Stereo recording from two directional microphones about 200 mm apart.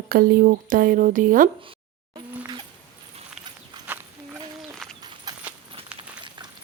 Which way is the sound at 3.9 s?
10° right (ahead or behind).